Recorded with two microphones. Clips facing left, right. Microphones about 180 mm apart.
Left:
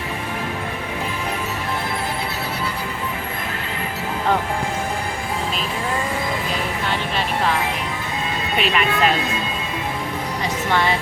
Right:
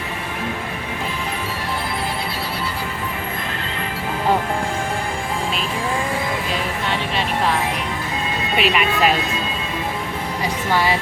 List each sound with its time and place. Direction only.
8.5 s speech: 5° right (ahead or behind)
10.7 s a woman's voice: 10° right (ahead or behind)